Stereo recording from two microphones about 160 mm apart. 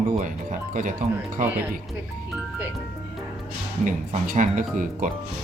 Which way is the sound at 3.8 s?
55° right (ahead or behind).